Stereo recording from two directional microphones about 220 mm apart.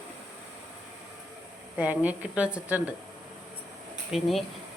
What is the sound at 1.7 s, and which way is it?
A woman's voice, 5° right (ahead or behind).